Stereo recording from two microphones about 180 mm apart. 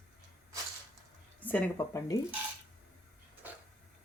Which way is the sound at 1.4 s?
10° left (ahead or behind).